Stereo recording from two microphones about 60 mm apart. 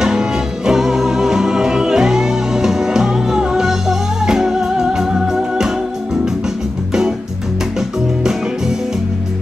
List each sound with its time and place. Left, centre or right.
0.0 s music: centre
8.2 s music: centre